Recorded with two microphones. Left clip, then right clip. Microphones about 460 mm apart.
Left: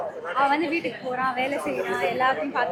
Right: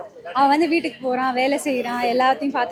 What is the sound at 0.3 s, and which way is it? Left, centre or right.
A woman's voice, right.